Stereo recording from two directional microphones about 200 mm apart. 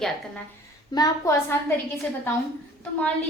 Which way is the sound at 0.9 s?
15° left (ahead or behind).